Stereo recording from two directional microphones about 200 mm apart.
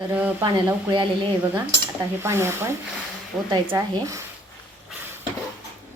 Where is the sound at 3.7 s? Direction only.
15° right (ahead or behind).